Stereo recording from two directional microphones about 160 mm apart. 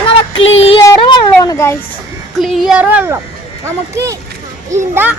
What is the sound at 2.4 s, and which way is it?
A child's voice, centre (ahead or behind).